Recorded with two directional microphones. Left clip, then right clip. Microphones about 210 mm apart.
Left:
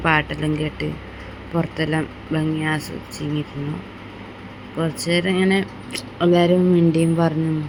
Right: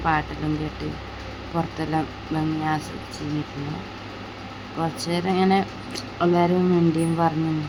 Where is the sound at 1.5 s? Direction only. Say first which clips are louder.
Left 3 dB; 10° left (ahead or behind).